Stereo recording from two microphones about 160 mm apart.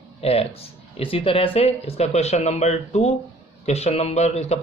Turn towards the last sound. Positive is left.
turn(degrees=45)  # may be behind; listen again after turning